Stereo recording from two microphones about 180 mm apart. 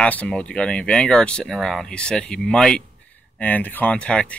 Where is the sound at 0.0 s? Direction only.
5° left (ahead or behind).